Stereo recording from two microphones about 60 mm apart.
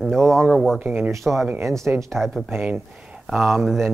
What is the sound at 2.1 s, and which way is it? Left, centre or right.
Speech, centre.